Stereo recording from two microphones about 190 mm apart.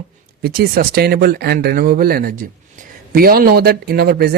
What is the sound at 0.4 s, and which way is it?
A man's voice, 50° right (ahead or behind).